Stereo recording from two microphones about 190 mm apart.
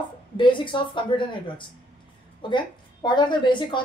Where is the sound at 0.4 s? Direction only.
25° left (ahead or behind).